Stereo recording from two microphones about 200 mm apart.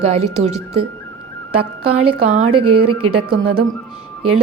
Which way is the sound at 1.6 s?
90° right.